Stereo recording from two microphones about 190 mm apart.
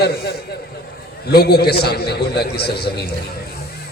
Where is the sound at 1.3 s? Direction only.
55° left (ahead or behind).